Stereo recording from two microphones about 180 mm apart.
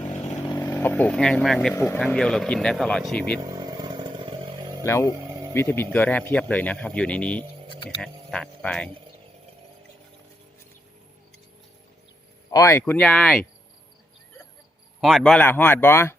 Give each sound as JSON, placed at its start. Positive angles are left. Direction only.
{"t": 0.4, "sound": "vehicle", "side_deg": 20}
{"t": 1.7, "sound": "speech", "side_deg": 15}
{"t": 2.0, "sound": "speech", "side_deg": 5}
{"t": 3.4, "sound": "motorcycle", "side_deg": -20}
{"t": 4.9, "sound": "speech", "side_deg": 15}
{"t": 12.5, "sound": "speech", "side_deg": 20}
{"t": 15.0, "sound": "speech", "side_deg": 0}